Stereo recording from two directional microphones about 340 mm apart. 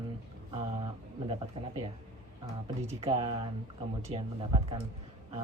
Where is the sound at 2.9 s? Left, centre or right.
Centre.